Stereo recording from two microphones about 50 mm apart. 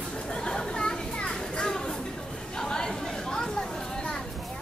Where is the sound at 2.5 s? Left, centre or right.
Centre.